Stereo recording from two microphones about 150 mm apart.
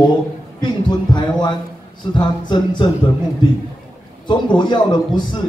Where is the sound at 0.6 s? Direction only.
30° left (ahead or behind).